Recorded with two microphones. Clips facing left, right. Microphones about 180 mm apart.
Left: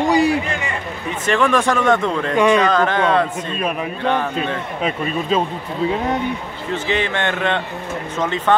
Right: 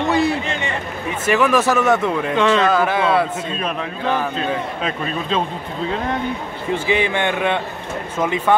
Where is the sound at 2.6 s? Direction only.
5° right (ahead or behind).